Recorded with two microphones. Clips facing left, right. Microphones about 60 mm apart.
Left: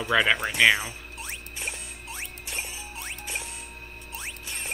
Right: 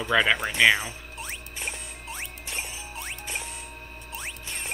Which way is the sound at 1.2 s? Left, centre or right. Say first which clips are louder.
Right 1 dB; right.